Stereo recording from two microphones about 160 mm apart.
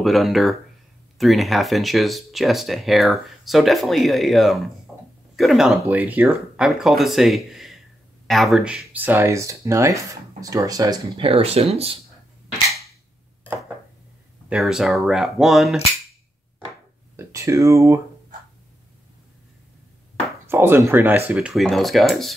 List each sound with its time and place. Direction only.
0.0 s speech: centre (ahead or behind)
4.9 s a sound: 5° right (ahead or behind)
5.3 s speech: centre (ahead or behind); by 12.0 s 40° right (ahead or behind)
14.5 s speech: 5° right (ahead or behind)
17.2 s speech: 20° right (ahead or behind)
20.4 s speech: 15° right (ahead or behind)